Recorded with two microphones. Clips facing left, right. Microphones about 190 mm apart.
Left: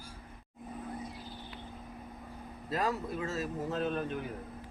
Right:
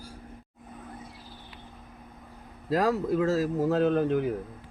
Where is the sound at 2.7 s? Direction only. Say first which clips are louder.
Right 9 dB; 90° right.